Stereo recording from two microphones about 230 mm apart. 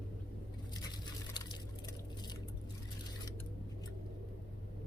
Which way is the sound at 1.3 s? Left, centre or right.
Centre.